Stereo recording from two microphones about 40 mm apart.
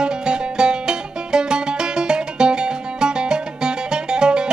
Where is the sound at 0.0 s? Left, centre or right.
Right.